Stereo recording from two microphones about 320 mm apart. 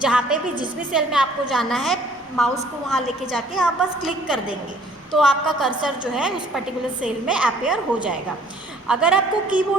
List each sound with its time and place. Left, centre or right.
0.0 s a woman's voice: centre